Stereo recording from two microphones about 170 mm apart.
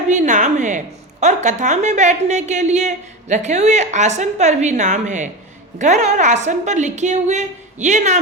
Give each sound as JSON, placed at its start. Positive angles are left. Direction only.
{"t": 0.1, "sound": "a woman's voice", "side_deg": -45}